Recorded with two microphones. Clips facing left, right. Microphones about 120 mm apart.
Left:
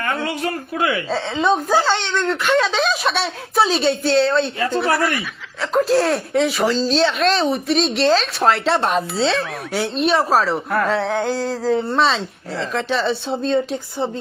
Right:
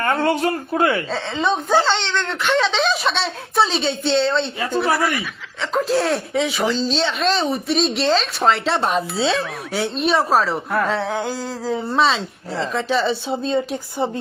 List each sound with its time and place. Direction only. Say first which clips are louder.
0.8 s speech: right 2 dB; 35° right (ahead or behind)
1.1 s speech: left 3 dB; centre (ahead or behind)